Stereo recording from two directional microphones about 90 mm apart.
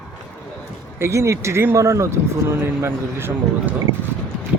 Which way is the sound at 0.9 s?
30° right (ahead or behind).